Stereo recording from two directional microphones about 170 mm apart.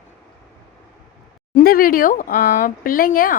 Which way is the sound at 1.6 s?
60° left (ahead or behind).